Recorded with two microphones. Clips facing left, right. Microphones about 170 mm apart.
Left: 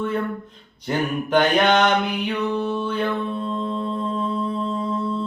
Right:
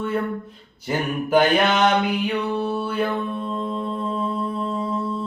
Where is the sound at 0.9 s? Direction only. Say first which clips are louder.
Even; 5° right (ahead or behind).